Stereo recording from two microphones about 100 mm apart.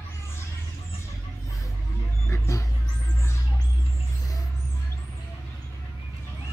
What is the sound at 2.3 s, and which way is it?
Dog, 30° left (ahead or behind).